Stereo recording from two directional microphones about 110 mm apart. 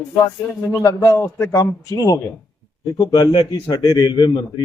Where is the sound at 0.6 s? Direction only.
25° left (ahead or behind).